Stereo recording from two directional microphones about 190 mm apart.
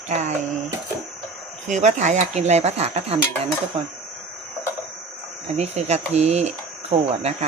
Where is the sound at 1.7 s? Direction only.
40° right (ahead or behind).